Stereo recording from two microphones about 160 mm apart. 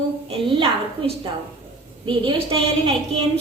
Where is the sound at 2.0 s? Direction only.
35° right (ahead or behind).